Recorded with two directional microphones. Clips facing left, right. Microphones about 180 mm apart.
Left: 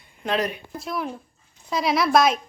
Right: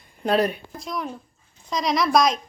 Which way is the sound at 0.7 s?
5° left (ahead or behind).